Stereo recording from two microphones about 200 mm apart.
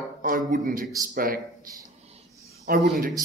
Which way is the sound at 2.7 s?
45° right (ahead or behind).